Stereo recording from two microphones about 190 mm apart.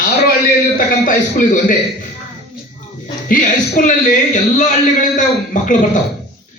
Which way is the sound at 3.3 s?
45° left (ahead or behind).